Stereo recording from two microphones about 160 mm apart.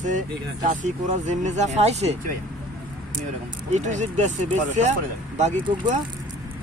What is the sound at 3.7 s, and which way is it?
Speech, 50° right (ahead or behind).